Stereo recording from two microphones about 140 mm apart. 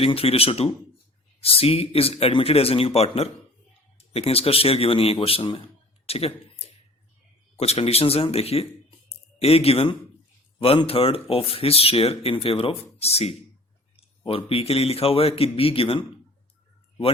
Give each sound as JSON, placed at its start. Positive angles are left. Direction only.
{"t": 0.0, "sound": "speech", "side_deg": 45}
{"t": 7.5, "sound": "speech", "side_deg": 45}
{"t": 9.0, "sound": "a sound", "side_deg": 45}
{"t": 10.6, "sound": "speech", "side_deg": 40}